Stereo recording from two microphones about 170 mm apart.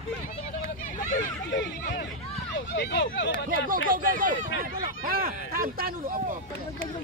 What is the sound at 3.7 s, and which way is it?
Speech, 55° right (ahead or behind).